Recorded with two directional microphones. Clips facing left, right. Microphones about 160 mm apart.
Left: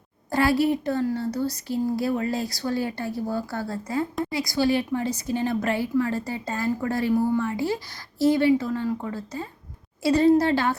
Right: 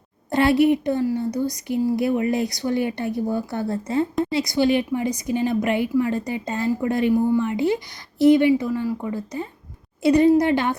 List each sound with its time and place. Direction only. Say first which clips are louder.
0.3 s a woman's voice: right 4 dB; 20° right (ahead or behind)